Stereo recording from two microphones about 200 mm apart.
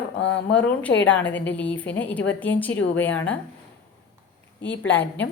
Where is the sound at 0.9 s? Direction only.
65° left (ahead or behind).